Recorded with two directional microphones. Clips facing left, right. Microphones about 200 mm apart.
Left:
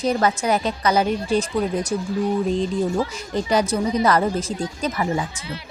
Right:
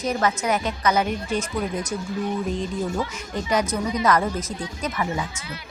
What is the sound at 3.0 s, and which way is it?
A woman's voice, 35° left (ahead or behind).